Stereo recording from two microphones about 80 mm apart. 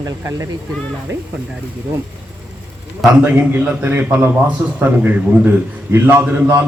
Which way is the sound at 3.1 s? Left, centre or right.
Centre.